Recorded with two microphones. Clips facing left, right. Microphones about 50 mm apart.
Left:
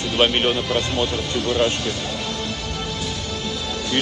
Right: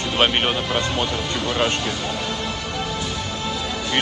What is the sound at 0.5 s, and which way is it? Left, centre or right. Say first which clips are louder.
Speech: left 1 dB; right.